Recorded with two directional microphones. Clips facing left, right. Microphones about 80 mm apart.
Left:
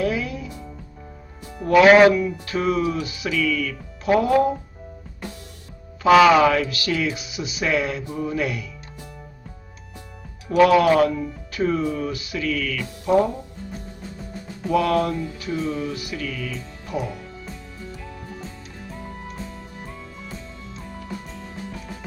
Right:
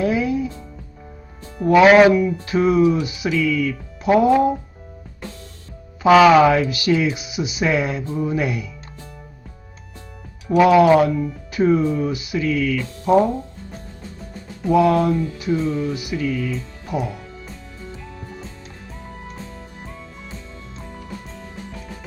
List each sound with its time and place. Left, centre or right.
0.0 s music: right
1.5 s speech: centre
6.4 s speech: centre
10.5 s speech: centre
11.1 s speech: centre
11.5 s speech: centre
14.7 s speech: centre